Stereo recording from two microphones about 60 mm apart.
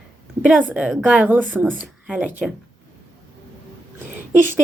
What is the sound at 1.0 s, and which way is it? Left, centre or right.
Speech, centre.